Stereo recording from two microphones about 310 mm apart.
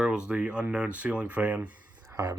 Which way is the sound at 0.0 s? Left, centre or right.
Centre.